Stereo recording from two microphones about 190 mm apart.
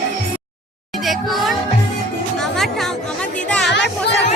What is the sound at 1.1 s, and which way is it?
Music, centre (ahead or behind).